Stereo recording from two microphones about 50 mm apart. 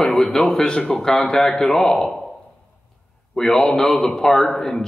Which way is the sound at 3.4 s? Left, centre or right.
Centre.